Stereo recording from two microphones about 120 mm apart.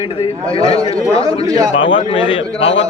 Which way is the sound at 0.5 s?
55° left (ahead or behind).